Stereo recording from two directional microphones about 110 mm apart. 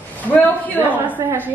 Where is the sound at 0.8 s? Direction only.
15° right (ahead or behind).